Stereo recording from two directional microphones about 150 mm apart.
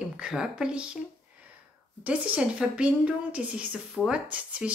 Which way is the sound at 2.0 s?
10° right (ahead or behind).